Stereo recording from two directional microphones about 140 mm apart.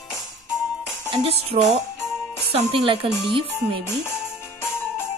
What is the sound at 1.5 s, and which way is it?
Speech, 40° right (ahead or behind).